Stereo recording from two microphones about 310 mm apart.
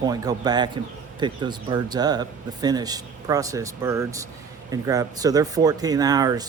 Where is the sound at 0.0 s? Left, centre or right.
Centre.